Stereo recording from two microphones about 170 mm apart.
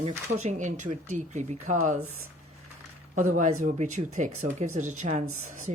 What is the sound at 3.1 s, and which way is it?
Speech, 45° right (ahead or behind).